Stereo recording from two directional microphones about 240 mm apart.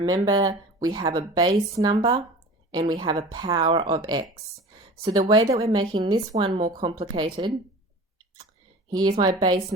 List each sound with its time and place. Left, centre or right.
0.0 s speech: centre
8.9 s speech: centre